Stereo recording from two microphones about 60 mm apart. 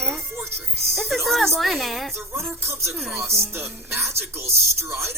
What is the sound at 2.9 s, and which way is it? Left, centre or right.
Speech, centre.